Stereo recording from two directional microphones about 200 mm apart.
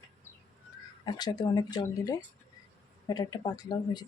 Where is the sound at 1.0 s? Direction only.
20° left (ahead or behind).